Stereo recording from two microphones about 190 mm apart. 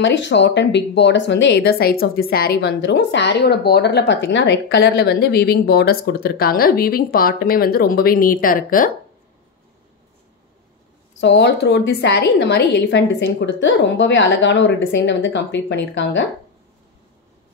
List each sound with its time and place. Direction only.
0.0 s speech: 70° left (ahead or behind); by 8.9 s 45° left (ahead or behind)
11.1 s a woman's voice: 65° left (ahead or behind)